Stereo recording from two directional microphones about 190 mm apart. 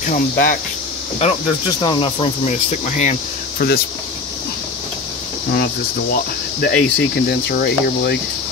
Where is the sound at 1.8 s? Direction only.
25° left (ahead or behind).